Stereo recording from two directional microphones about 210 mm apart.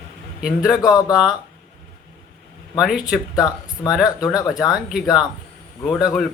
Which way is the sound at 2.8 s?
5° right (ahead or behind).